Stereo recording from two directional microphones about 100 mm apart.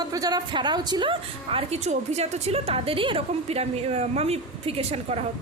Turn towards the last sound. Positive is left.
turn(degrees=-90)